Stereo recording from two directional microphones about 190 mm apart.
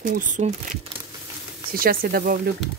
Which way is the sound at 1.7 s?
50° right (ahead or behind).